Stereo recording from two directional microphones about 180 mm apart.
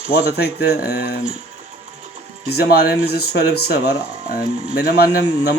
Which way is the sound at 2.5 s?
65° left (ahead or behind).